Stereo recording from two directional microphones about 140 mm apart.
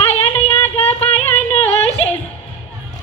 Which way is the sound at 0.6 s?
15° left (ahead or behind).